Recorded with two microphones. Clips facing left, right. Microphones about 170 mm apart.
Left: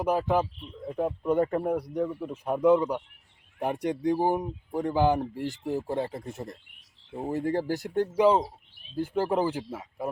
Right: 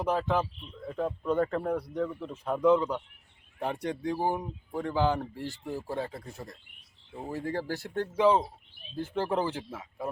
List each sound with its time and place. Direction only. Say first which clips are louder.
0.0 s a man's voice: left 3 dB; 10° left (ahead or behind)